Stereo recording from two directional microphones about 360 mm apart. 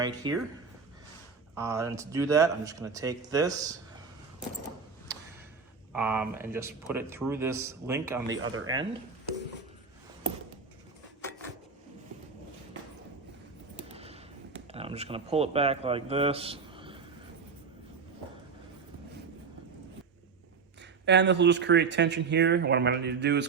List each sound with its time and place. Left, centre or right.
0.0 s speech: centre
1.5 s speech: centre
5.9 s speech: centre
8.4 s speech: right
8.6 s speech: centre
13.9 s a sound: centre
14.7 s speech: centre
21.0 s speech: right